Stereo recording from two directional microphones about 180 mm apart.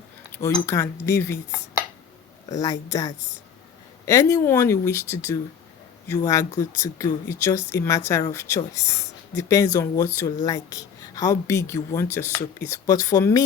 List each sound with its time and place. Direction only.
0.3 s a woman's voice: 15° left (ahead or behind)
2.5 s a woman's voice: 20° left (ahead or behind)